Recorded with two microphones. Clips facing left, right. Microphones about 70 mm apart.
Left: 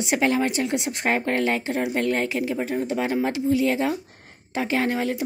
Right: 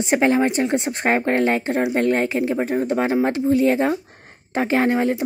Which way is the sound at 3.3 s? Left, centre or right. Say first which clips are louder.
Right 4 dB; right.